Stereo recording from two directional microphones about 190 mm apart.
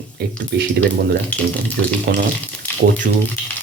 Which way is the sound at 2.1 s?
65° right (ahead or behind).